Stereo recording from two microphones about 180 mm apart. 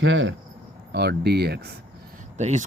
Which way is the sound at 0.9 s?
65° right (ahead or behind).